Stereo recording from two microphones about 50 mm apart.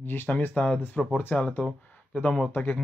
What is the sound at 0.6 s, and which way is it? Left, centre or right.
Speech, left.